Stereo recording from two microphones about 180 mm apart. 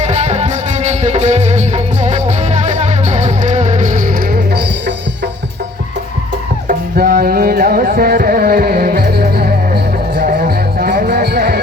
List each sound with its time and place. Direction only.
0.0 s music: 40° right (ahead or behind); by 4.9 s 60° right (ahead or behind)
6.7 s music: 55° right (ahead or behind)